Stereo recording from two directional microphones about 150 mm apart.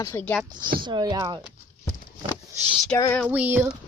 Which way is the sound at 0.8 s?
30° right (ahead or behind).